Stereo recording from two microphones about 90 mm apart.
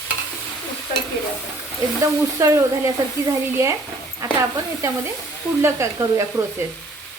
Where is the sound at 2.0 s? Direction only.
35° right (ahead or behind).